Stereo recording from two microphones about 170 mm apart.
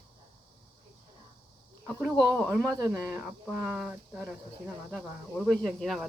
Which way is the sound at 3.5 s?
5° right (ahead or behind).